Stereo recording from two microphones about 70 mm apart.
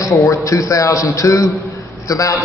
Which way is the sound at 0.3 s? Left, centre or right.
Left.